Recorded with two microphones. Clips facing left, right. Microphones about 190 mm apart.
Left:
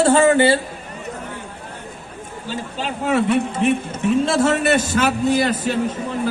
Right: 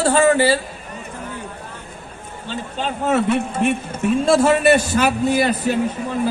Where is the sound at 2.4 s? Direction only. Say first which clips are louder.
Right 1 dB; 5° left (ahead or behind).